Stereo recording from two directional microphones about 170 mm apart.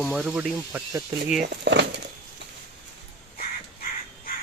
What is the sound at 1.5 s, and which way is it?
Speech, 90° right.